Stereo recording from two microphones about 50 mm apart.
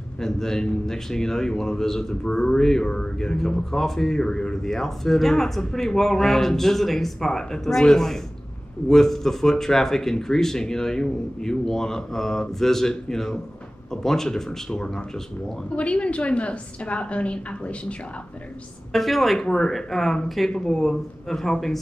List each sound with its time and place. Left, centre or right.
0.2 s speech: centre
15.7 s a woman's voice: left
18.9 s a woman's voice: centre